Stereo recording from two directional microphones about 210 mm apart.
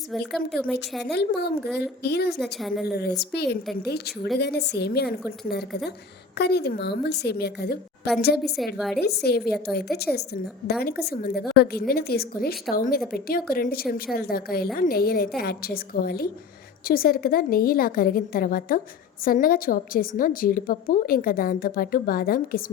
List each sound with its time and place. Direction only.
0.1 s speech: centre (ahead or behind)
1.1 s a woman's voice: 50° left (ahead or behind)
2.4 s speech: centre (ahead or behind)
2.9 s a woman's voice: 50° left (ahead or behind)
6.3 s a woman's voice: 50° left (ahead or behind)
8.5 s speech: centre (ahead or behind)
9.0 s a woman's voice: 50° left (ahead or behind)